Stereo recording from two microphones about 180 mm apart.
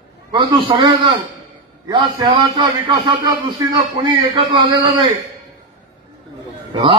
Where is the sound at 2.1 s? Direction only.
25° right (ahead or behind).